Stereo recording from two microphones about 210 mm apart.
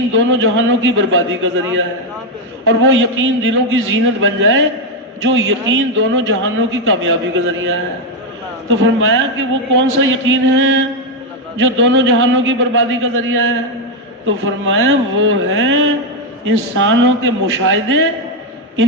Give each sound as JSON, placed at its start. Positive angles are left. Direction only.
{"t": 0.3, "sound": "a man's voice", "side_deg": -65}
{"t": 8.7, "sound": "a man's voice", "side_deg": -65}